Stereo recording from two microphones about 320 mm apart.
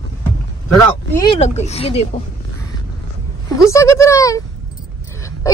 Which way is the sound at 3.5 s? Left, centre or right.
Centre.